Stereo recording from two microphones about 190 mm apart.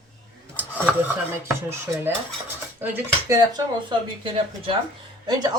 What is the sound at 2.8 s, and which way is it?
Speech, 15° right (ahead or behind).